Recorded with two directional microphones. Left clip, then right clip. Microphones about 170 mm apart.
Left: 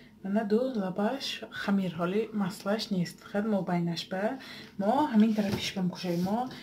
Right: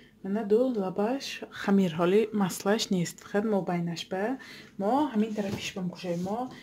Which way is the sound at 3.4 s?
40° right (ahead or behind).